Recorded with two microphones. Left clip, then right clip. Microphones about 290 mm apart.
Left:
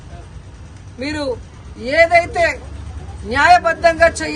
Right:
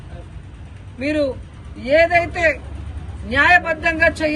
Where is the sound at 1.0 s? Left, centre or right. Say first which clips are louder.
Right 2 dB; centre.